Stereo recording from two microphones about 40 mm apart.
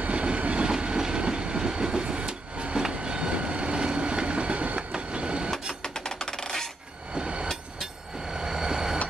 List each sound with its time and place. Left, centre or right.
0.0 s train: right
4.9 s vehicle: right
5.8 s coin: centre
7.2 s train: right